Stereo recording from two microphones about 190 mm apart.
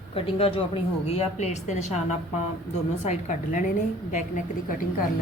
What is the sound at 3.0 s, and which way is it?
A woman's voice, 40° left (ahead or behind).